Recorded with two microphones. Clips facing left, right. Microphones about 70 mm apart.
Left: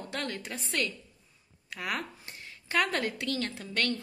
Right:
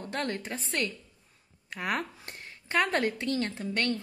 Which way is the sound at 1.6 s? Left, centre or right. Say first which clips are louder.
Right 3 dB; right.